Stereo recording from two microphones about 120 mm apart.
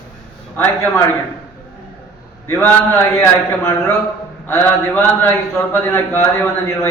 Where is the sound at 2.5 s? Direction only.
15° left (ahead or behind).